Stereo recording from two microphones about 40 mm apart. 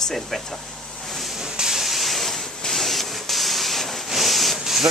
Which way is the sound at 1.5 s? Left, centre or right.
Centre.